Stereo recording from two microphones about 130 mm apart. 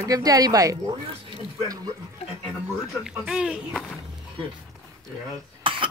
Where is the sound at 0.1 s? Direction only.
30° right (ahead or behind).